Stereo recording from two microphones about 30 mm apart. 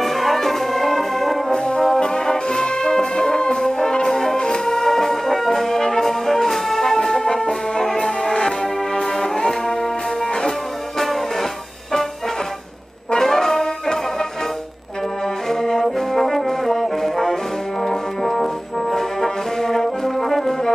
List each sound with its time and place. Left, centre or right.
0.0 s brass instrument: centre
1.5 s brass instrument: left
9.1 s music: centre
13.2 s brass instrument: centre
15.5 s brass instrument: centre